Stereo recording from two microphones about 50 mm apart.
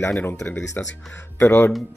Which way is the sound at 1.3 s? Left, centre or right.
Left.